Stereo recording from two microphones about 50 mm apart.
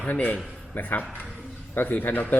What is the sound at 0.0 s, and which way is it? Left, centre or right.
A man's voice, left.